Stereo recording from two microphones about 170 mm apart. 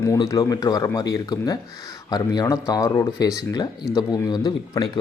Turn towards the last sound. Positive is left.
turn(degrees=25)  # may be behind; listen again after turning